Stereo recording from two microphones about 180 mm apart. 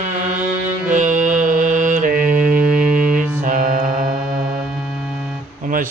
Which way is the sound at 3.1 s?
45° right (ahead or behind).